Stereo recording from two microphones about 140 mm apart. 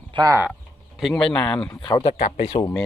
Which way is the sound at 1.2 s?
5° left (ahead or behind).